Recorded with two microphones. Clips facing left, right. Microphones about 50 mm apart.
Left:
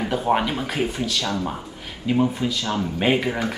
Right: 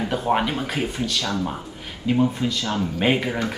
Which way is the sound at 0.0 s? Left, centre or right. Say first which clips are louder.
Left 1 dB; centre.